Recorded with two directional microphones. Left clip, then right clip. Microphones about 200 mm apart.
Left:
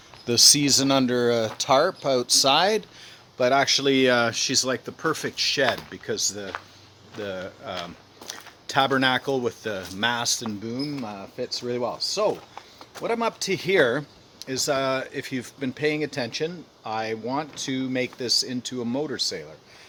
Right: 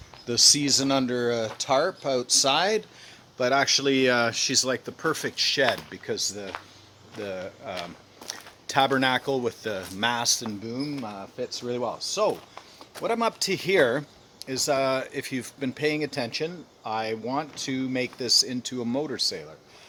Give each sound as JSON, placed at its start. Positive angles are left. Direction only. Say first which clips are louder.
{"t": 0.3, "sound": "speech", "louder": "left 3 dB", "side_deg": 35}